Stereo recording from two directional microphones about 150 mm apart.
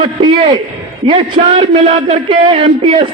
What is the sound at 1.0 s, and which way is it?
A man's voice, 35° right (ahead or behind).